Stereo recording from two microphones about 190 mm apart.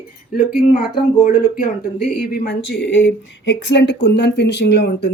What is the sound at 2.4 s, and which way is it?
A woman's voice, 70° left (ahead or behind).